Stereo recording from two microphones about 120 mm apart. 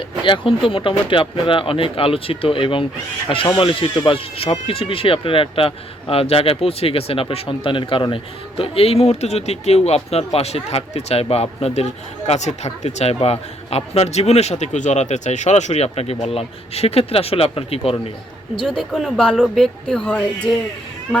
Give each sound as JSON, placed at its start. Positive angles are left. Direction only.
{"t": 0.3, "sound": "speech", "side_deg": 45}
{"t": 18.6, "sound": "speech", "side_deg": 5}